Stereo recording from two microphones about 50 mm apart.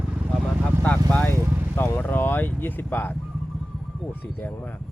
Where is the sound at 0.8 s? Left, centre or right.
Left.